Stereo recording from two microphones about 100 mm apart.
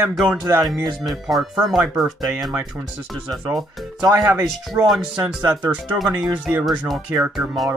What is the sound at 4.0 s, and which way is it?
Speech, 30° right (ahead or behind).